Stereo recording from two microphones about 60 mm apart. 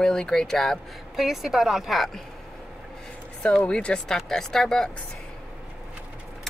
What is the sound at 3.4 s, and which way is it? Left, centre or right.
Speech, centre.